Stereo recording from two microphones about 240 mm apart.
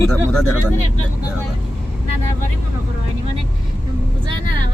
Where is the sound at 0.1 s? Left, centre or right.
Centre.